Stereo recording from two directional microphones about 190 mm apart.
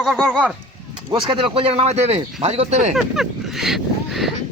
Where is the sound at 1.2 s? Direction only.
25° right (ahead or behind).